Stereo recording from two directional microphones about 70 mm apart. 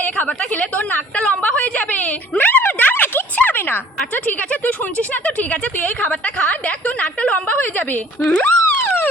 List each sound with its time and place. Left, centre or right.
0.0 s a woman's voice: left
8.5 s music: left